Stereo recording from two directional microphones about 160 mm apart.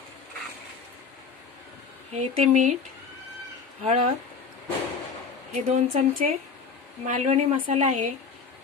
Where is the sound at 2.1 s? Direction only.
50° right (ahead or behind).